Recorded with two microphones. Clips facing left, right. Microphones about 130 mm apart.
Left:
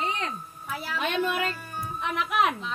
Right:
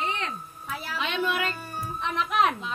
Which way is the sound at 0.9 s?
50° left (ahead or behind).